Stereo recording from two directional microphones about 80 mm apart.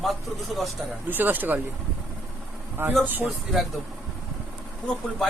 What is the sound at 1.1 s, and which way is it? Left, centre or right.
Speech, right.